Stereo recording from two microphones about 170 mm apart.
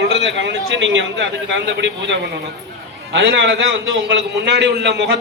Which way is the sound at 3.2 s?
80° right.